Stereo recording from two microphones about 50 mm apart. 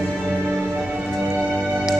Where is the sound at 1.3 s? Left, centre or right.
Centre.